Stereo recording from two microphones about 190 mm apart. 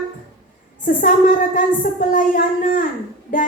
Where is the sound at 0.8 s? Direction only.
45° left (ahead or behind).